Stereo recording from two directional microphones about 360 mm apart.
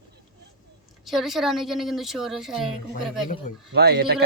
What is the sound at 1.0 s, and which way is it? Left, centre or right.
A woman's voice, centre.